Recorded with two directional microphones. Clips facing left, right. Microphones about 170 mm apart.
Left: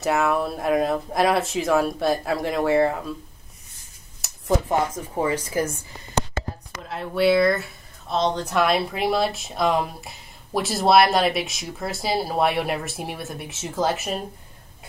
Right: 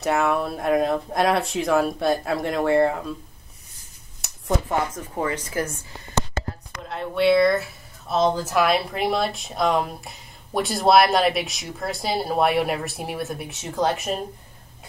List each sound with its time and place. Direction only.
0.0 s speech: centre (ahead or behind)
4.2 s a sound: centre (ahead or behind)
4.6 s speech: 15° left (ahead or behind)
6.7 s speech: centre (ahead or behind)